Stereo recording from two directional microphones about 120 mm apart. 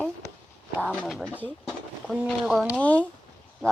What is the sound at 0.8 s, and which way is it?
Speech, 10° left (ahead or behind).